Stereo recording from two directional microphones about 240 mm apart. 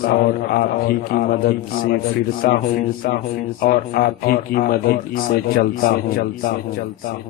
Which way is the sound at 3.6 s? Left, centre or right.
Left.